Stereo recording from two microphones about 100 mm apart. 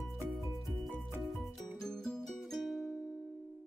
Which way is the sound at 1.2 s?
Centre (ahead or behind).